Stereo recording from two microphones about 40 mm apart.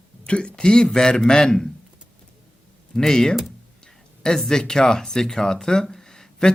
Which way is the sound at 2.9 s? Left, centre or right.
Centre.